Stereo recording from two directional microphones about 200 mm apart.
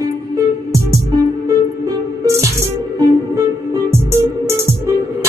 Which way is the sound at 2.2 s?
15° right (ahead or behind).